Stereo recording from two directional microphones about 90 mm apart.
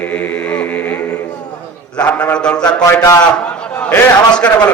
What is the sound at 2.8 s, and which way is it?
Speech, 40° left (ahead or behind).